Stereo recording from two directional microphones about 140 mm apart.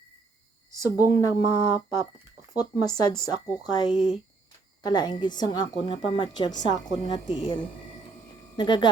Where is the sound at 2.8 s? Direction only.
30° left (ahead or behind).